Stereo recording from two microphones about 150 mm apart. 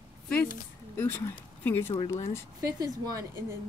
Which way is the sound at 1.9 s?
25° left (ahead or behind).